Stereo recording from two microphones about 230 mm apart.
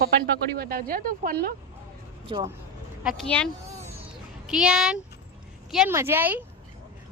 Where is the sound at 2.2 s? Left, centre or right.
Centre.